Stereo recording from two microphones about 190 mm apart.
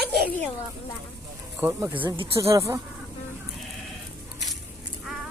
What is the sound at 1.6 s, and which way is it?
Speech, 10° right (ahead or behind).